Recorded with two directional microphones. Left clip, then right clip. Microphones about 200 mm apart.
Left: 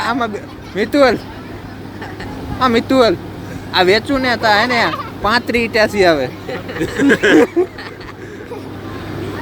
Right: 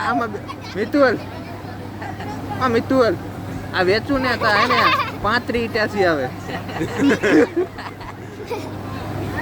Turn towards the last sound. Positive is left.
turn(degrees=25)  # may be behind; listen again after turning